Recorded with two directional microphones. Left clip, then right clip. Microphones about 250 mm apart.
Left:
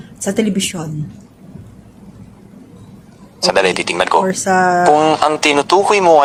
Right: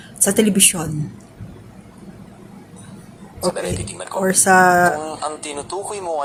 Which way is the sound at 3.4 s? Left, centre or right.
Left.